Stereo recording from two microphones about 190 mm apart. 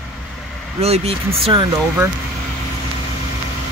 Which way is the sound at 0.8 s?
35° right (ahead or behind).